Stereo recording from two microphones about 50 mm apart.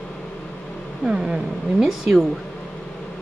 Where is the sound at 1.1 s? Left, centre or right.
Centre.